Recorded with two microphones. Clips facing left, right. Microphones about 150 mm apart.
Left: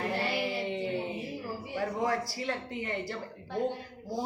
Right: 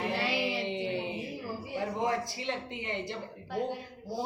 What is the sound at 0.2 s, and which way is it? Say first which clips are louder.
Child singing: even; 90° right.